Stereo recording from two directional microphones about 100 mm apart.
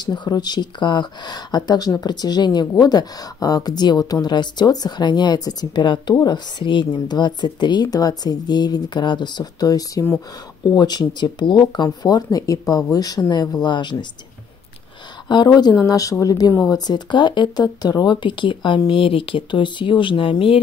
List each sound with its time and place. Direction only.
0.0 s speech: 45° left (ahead or behind)
15.2 s speech: 45° left (ahead or behind); by 20.6 s 65° left (ahead or behind)